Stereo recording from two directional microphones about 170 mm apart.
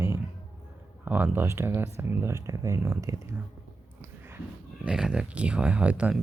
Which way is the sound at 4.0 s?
15° right (ahead or behind).